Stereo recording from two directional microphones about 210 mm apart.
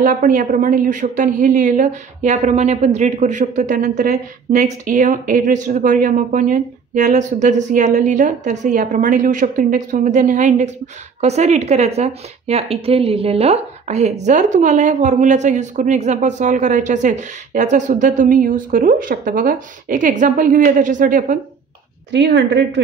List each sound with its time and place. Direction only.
0.0 s a woman's voice: 40° right (ahead or behind)
22.1 s a woman's voice: 55° right (ahead or behind)